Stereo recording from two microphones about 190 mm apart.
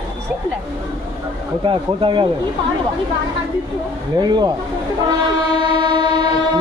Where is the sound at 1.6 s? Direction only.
25° right (ahead or behind).